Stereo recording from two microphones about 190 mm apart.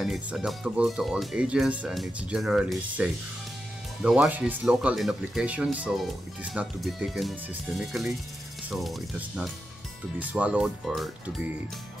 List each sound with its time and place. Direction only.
0.0 s speech: 5° right (ahead or behind)